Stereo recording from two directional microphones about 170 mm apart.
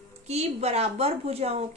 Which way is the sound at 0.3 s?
40° right (ahead or behind).